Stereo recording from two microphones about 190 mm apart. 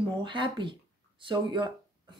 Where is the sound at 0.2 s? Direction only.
25° right (ahead or behind).